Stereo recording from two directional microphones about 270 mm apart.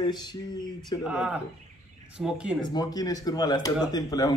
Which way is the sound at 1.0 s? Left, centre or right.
Centre.